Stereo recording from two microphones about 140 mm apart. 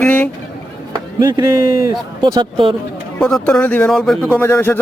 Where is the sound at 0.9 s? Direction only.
30° right (ahead or behind).